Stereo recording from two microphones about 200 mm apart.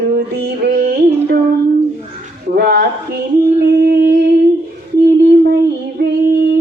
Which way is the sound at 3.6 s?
50° right (ahead or behind).